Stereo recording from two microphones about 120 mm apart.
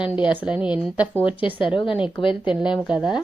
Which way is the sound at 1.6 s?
45° left (ahead or behind).